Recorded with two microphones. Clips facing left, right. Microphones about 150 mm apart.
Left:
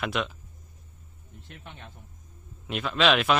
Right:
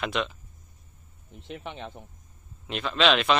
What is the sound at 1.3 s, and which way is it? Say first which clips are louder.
Speech: right 9 dB; 90° right.